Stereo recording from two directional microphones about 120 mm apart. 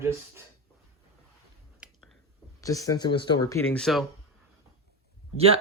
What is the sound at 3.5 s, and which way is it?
Speech, 20° left (ahead or behind).